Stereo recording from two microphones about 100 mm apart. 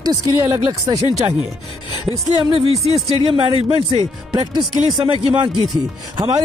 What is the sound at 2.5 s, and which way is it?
Speech, 90° right.